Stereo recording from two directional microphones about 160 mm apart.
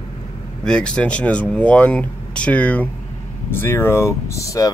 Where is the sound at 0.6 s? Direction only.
5° left (ahead or behind).